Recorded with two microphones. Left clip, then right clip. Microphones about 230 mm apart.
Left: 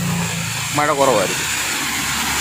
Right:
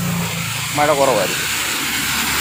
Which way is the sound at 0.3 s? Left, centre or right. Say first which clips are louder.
Even; centre.